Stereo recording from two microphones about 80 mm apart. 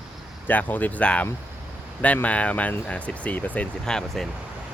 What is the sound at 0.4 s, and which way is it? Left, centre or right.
Speech, left.